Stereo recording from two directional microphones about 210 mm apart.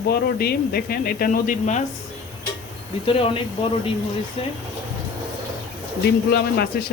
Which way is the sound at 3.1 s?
25° left (ahead or behind).